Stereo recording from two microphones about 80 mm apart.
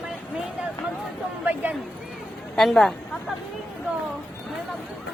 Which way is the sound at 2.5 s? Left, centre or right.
Centre.